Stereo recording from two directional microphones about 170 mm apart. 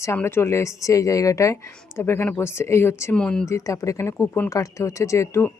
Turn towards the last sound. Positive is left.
turn(degrees=15)  # may be behind; listen again after turning